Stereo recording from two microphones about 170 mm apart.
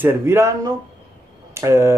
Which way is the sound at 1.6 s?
15° right (ahead or behind).